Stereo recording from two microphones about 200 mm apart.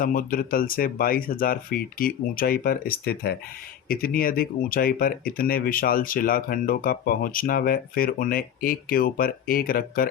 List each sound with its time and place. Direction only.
0.0 s speech: 45° left (ahead or behind)